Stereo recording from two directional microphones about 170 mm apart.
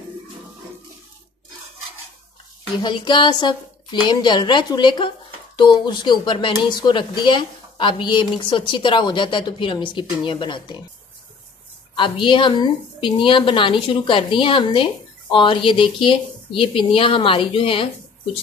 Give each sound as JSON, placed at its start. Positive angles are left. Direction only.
{"t": 2.8, "sound": "a woman's voice", "side_deg": 25}
{"t": 11.9, "sound": "a woman's voice", "side_deg": 30}